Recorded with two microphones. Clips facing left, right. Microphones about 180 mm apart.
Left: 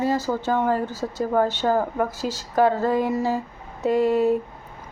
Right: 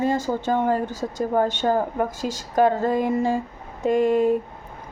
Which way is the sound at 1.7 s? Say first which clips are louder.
Even; 25° right (ahead or behind).